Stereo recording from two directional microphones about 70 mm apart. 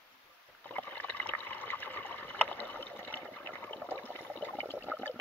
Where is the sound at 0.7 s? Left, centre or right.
Left.